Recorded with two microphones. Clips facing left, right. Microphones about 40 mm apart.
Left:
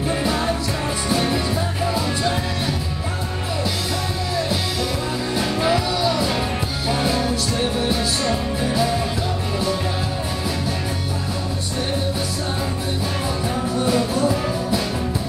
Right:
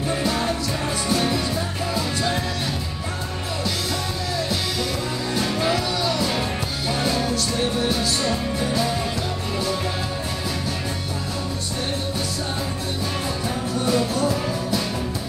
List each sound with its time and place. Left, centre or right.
0.1 s music: centre
5.3 s music: centre
13.7 s music: centre